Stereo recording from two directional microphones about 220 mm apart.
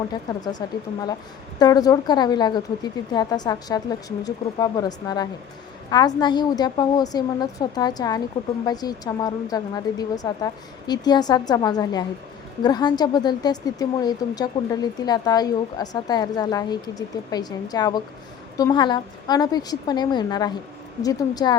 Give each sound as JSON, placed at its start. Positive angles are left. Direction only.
{"t": 0.6, "sound": "a woman's voice", "side_deg": 15}